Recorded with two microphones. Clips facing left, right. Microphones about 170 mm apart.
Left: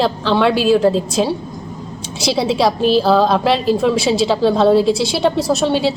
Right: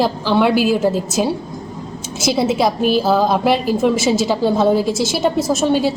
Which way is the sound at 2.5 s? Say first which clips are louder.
Left 2 dB; 50° right (ahead or behind).